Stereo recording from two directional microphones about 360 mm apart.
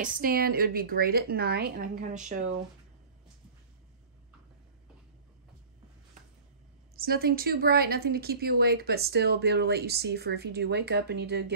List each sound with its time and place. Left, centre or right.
0.0 s speech: right
7.0 s speech: right